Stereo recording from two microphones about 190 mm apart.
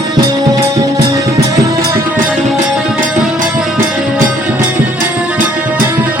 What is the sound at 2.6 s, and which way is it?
Music, centre (ahead or behind).